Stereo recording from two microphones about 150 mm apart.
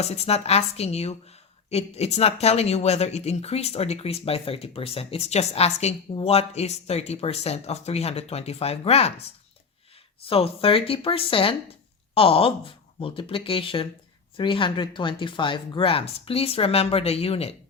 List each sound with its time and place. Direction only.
0.0 s a woman's voice: 45° left (ahead or behind)
10.2 s speech: 40° left (ahead or behind)